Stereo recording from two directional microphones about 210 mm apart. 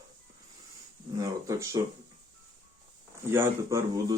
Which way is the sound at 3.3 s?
15° right (ahead or behind).